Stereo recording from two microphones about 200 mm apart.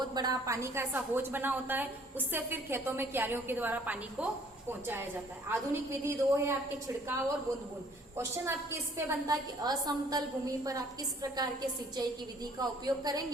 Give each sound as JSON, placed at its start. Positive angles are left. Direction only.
{"t": 0.1, "sound": "a woman's voice", "side_deg": -20}
{"t": 5.5, "sound": "a woman's voice", "side_deg": -10}
{"t": 8.1, "sound": "a woman's voice", "side_deg": -15}